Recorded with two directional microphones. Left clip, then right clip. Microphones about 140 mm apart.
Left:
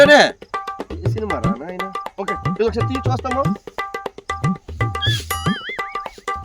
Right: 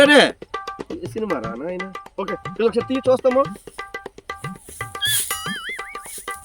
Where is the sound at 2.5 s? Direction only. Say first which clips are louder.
Right 2 dB; 15° left (ahead or behind).